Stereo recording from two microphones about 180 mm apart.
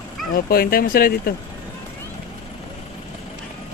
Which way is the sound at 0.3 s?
55° left (ahead or behind).